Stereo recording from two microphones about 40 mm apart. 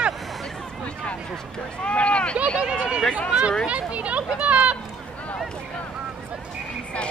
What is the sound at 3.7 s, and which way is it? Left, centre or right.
Speech, right.